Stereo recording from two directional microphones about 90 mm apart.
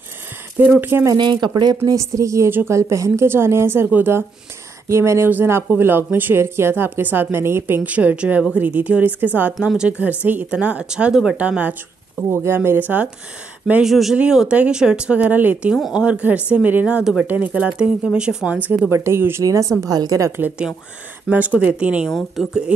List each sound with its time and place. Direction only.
0.6 s a woman's voice: 20° right (ahead or behind)
1.1 s speech: 55° right (ahead or behind)
1.9 s a woman's voice: 35° right (ahead or behind)
4.8 s a woman's voice: 30° right (ahead or behind)
9.6 s speech: 5° right (ahead or behind)
9.8 s speech: 15° right (ahead or behind)
12.2 s a woman's voice: 25° right (ahead or behind)
13.8 s speech: 5° right (ahead or behind)
15.7 s speech: 5° right (ahead or behind)
17.0 s speech: 5° right (ahead or behind)
18.9 s a woman's voice: 30° right (ahead or behind)
20.2 s a woman's voice: 25° right (ahead or behind)
21.3 s speech: 15° right (ahead or behind)
22.1 s speech: centre (ahead or behind)